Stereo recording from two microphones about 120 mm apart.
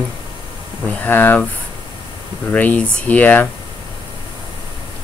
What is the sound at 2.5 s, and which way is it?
Speech, 10° left (ahead or behind).